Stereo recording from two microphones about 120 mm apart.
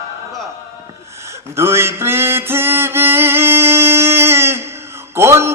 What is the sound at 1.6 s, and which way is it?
Music, 20° right (ahead or behind).